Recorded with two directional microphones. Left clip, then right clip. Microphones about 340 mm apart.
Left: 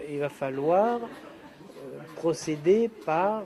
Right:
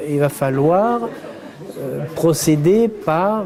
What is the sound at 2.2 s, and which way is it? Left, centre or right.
Speech, right.